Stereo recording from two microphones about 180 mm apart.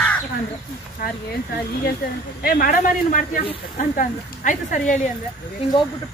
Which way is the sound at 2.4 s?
55° left (ahead or behind).